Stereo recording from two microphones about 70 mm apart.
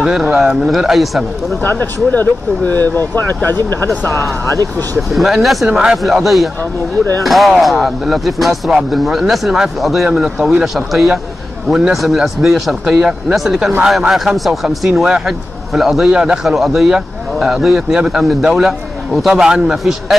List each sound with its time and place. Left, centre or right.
0.0 s speech: centre
1.6 s speech: left
4.1 s speech: centre
5.7 s a man's voice: centre
6.0 s a man's voice: centre
16.4 s speech: centre